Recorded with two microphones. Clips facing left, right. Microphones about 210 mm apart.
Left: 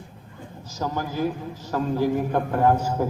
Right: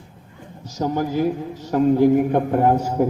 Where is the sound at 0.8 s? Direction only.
25° right (ahead or behind).